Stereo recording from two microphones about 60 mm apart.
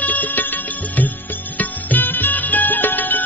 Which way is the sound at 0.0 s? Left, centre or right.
Left.